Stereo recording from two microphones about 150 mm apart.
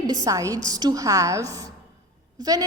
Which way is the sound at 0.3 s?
25° right (ahead or behind).